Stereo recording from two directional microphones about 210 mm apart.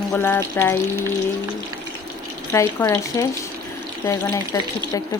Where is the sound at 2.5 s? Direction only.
15° left (ahead or behind).